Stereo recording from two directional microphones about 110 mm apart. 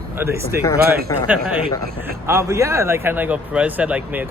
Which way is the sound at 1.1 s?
35° left (ahead or behind).